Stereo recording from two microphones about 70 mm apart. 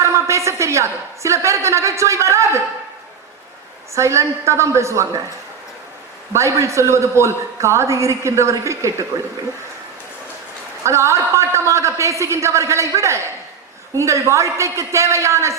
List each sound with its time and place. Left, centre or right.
0.0 s a sound: right
3.9 s a woman's voice: right
6.3 s a woman's voice: right
10.8 s a woman's voice: right